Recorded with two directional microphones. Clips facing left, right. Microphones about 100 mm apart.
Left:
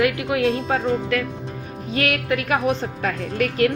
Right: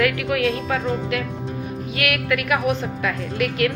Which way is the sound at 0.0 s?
25° left (ahead or behind).